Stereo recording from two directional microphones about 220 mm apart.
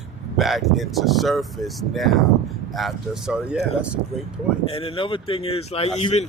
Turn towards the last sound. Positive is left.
turn(degrees=30)  # may be behind; listen again after turning